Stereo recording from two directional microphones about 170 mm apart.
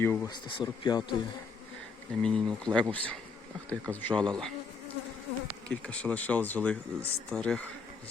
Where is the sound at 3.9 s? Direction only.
10° left (ahead or behind).